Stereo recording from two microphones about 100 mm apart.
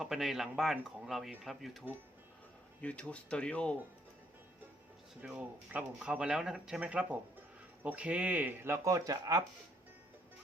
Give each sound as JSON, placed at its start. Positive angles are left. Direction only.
{"t": 0.0, "sound": "speech", "side_deg": -5}
{"t": 2.8, "sound": "speech", "side_deg": 15}
{"t": 5.2, "sound": "speech", "side_deg": -10}